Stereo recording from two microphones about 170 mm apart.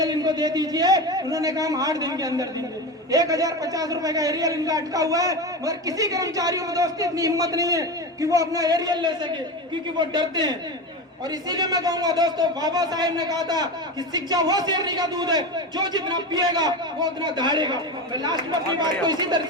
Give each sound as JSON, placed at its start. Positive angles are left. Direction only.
{"t": 0.0, "sound": "a man's voice", "side_deg": -25}